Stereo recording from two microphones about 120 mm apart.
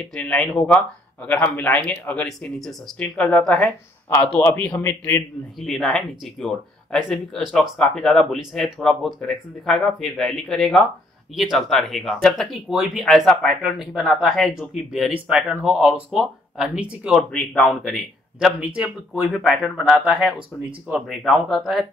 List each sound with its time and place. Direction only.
0.0 s speech: 10° left (ahead or behind)
5.6 s speech: centre (ahead or behind)
17.3 s speech: 10° left (ahead or behind)
17.6 s speech: centre (ahead or behind)